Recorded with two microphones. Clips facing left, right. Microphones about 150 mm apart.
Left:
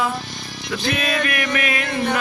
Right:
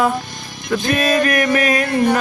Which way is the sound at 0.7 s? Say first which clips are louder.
Right 6 dB; 45° right (ahead or behind).